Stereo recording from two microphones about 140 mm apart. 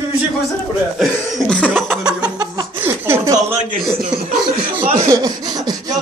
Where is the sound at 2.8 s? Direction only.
15° right (ahead or behind).